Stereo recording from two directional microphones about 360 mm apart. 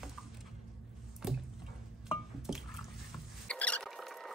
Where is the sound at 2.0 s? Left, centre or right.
Centre.